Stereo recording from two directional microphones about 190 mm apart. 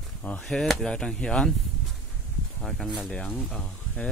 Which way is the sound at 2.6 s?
Centre (ahead or behind).